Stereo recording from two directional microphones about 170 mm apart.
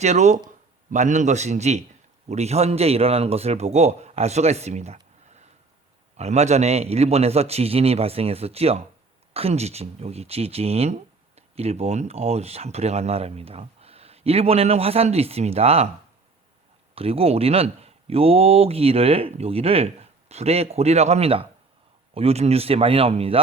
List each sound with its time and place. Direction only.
0.0 s a man's voice: 45° right (ahead or behind)
16.9 s speech: 35° right (ahead or behind)